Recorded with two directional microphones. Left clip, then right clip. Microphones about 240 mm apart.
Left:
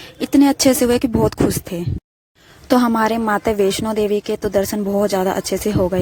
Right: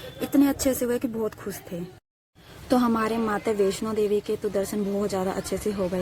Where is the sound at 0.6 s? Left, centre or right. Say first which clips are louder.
Left 10 dB; left.